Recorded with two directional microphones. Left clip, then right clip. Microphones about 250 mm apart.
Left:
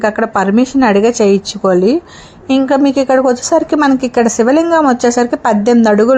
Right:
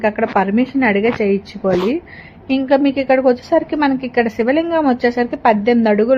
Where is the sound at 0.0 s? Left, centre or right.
Centre.